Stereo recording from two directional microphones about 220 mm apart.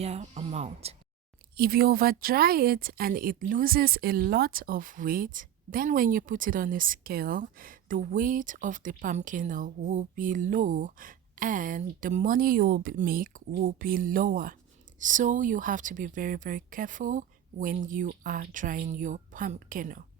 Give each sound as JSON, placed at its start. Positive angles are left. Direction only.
{"t": 0.0, "sound": "speech", "side_deg": -30}
{"t": 1.5, "sound": "a woman's voice", "side_deg": -45}